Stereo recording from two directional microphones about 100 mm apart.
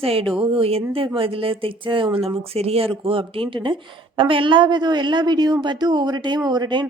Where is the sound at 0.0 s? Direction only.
70° right (ahead or behind).